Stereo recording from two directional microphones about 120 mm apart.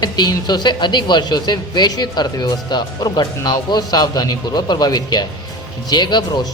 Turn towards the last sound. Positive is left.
turn(degrees=35)  # may be behind; listen again after turning